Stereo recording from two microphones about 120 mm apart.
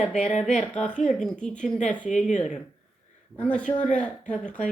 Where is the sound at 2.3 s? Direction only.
85° left.